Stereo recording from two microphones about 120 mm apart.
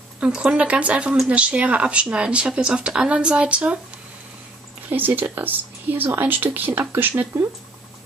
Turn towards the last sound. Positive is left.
turn(degrees=-15)  # may be behind; listen again after turning